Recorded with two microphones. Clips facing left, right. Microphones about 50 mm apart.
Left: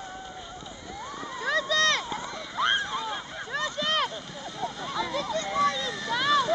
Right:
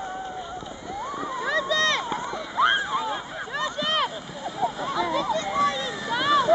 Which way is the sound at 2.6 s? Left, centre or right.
Centre.